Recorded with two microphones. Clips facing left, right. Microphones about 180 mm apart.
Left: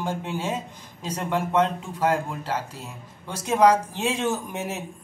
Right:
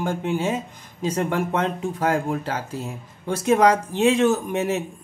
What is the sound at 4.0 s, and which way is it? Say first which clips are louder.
Speech: right 8 dB; 70° right (ahead or behind).